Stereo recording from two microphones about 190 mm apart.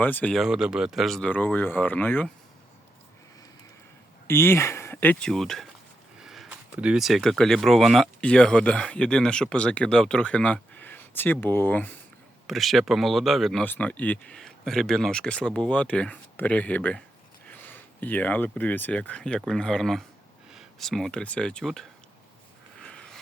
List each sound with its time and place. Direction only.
0.0 s speech: 10° left (ahead or behind)
4.3 s speech: 10° left (ahead or behind)
22.8 s a sound: 5° left (ahead or behind)